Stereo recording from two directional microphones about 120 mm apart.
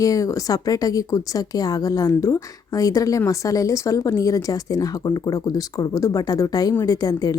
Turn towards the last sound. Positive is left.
turn(degrees=30)  # may be behind; listen again after turning